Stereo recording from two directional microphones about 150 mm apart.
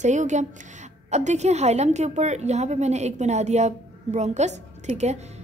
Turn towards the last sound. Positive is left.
turn(degrees=-50)  # may be behind; listen again after turning